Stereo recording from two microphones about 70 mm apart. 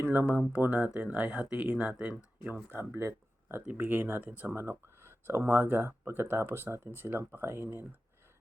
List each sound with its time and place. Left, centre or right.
0.0 s speech: right
2.6 s speech: right